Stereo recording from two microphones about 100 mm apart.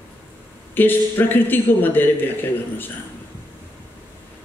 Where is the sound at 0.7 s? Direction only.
20° left (ahead or behind).